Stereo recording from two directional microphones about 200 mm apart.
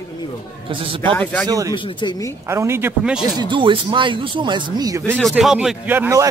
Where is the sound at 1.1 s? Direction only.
5° left (ahead or behind).